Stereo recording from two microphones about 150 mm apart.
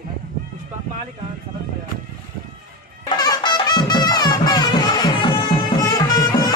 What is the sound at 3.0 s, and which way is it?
Music, 30° left (ahead or behind).